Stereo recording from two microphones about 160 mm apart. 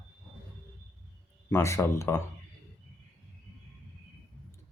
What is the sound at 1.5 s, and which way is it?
Speech, 15° left (ahead or behind).